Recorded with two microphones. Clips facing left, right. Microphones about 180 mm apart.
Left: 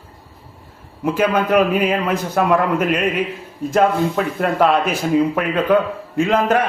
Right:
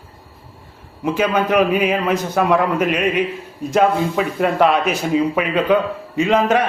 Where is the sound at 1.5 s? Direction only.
5° right (ahead or behind).